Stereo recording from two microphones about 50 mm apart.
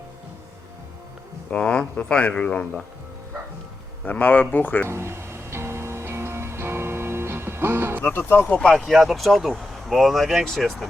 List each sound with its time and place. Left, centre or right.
1.5 s speech: left
4.2 s speech: left
4.9 s music: right
8.3 s speech: left
8.5 s speech: centre
8.8 s speech: centre
10.4 s speech: centre